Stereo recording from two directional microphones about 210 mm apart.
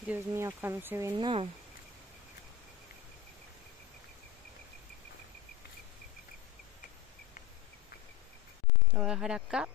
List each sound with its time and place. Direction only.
0.1 s speech: 10° right (ahead or behind)
1.1 s speech: 25° right (ahead or behind)
8.9 s speech: 5° right (ahead or behind)